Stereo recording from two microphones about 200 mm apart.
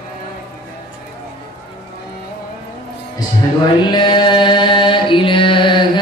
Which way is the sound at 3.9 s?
20° left (ahead or behind).